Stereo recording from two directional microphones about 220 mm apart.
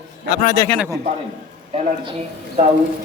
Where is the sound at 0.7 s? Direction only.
Centre (ahead or behind).